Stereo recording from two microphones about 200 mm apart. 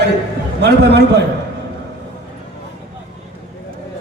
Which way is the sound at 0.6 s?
55° right (ahead or behind).